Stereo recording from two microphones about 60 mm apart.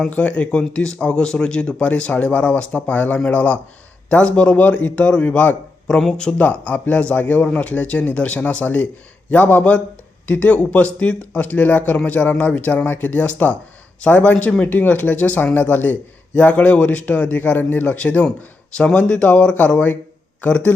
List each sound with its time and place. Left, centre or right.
0.1 s speech: left
5.9 s speech: centre
6.4 s speech: left